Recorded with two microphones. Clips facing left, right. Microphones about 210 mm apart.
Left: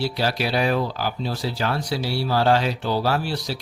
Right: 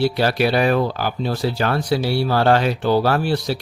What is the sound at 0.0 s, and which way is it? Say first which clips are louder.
Speech: right 6 dB; 60° right (ahead or behind).